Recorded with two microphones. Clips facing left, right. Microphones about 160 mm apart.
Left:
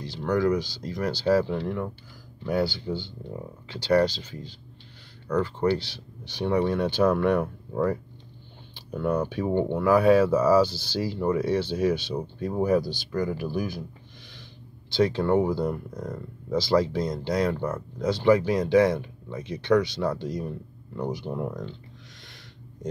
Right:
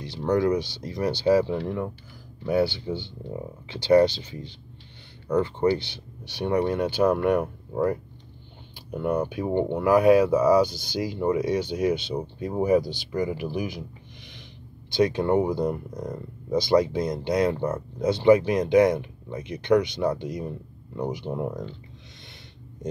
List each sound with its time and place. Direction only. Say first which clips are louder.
0.0 s speech: right 1 dB; 20° right (ahead or behind)
14.9 s speech: right 1 dB; 15° right (ahead or behind)